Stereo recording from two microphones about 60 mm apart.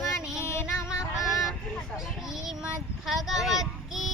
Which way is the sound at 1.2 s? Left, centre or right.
Centre.